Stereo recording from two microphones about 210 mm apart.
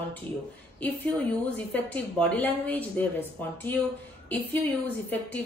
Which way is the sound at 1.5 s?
5° left (ahead or behind).